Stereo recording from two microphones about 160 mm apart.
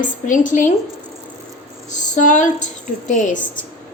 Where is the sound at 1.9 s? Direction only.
50° left (ahead or behind).